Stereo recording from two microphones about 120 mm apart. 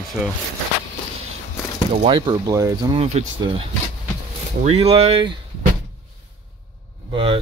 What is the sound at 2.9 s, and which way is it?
Speech, 55° right (ahead or behind).